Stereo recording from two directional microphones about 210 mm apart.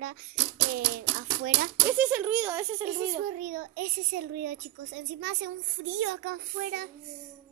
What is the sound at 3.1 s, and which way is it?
A child's voice, 35° right (ahead or behind).